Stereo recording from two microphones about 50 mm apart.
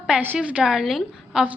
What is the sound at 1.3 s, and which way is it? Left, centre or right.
Speech, centre.